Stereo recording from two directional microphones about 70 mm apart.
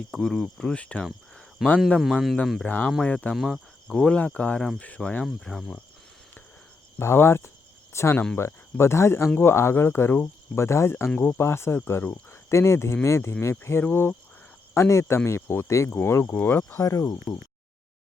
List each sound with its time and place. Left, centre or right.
0.1 s speech: centre
1.6 s speech: centre
2.6 s speech: left
3.3 s speech: centre
3.8 s speech: centre
5.5 s speech: centre
7.0 s speech: left
14.7 s speech: left
16.7 s speech: left